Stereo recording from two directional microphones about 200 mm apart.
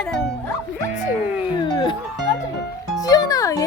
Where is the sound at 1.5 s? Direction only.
20° left (ahead or behind).